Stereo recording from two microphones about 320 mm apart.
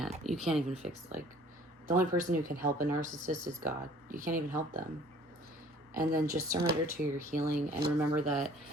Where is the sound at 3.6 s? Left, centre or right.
Centre.